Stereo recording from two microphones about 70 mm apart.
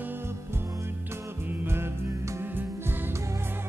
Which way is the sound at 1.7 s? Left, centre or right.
Right.